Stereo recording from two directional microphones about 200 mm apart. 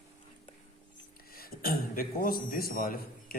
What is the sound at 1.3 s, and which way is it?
A man's voice, 50° left (ahead or behind).